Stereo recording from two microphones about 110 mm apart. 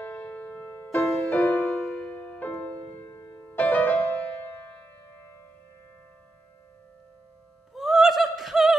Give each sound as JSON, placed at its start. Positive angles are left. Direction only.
{"t": 0.0, "sound": "music", "side_deg": 10}
{"t": 1.0, "sound": "music", "side_deg": 0}
{"t": 1.3, "sound": "music", "side_deg": 15}
{"t": 3.1, "sound": "music", "side_deg": 25}
{"t": 3.5, "sound": "music", "side_deg": 15}
{"t": 7.7, "sound": "a sound", "side_deg": -5}